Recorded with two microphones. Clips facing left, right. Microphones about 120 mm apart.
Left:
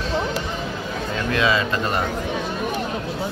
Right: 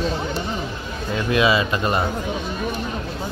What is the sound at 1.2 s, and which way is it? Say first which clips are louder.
Speech: right 2 dB; 10° right (ahead or behind).